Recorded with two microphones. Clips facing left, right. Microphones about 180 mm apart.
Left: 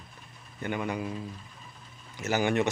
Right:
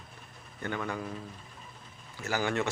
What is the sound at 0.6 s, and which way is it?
Speech, 15° left (ahead or behind).